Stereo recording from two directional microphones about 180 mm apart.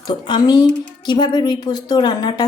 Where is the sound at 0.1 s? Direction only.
25° left (ahead or behind).